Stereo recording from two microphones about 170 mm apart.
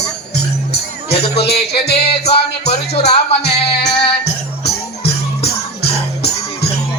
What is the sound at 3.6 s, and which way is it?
Music, 75° left (ahead or behind).